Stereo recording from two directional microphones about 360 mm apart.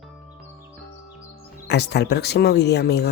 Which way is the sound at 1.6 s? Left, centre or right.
Left.